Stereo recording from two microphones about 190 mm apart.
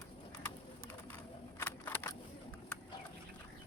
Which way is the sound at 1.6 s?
10° left (ahead or behind).